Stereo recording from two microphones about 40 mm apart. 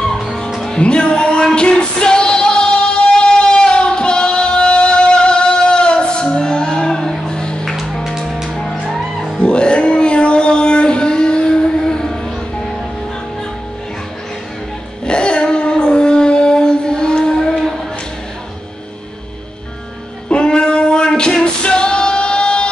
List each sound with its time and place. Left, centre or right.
0.0 s music: centre
0.7 s music: left
7.6 s music: centre
9.4 s cat: left
15.0 s a sound: left
20.2 s music: left